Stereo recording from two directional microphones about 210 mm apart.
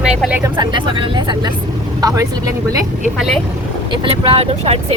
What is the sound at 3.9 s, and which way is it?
Speech, 25° right (ahead or behind).